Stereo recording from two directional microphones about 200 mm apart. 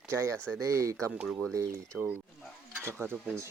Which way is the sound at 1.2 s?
Centre (ahead or behind).